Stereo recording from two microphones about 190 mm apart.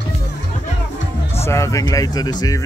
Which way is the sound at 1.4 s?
15° left (ahead or behind).